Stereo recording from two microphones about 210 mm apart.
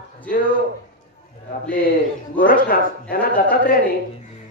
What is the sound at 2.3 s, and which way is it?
A man's voice, 40° left (ahead or behind).